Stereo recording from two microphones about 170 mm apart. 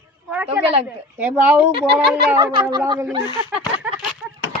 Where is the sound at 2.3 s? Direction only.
20° right (ahead or behind).